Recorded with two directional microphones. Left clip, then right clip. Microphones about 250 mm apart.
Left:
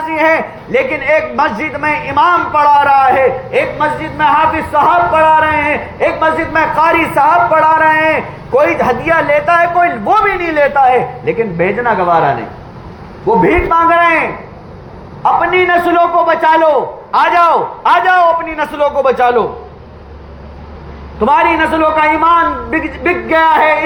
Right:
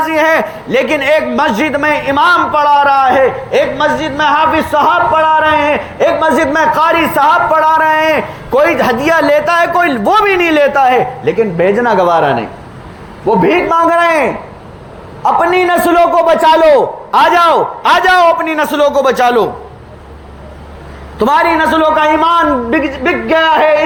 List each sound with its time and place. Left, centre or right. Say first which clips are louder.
0.0 s a man's voice: right 2 dB; right
13.2 s a man's voice: even; right
17.2 s a man's voice: right 1 dB; right
21.2 s a man's voice: even; right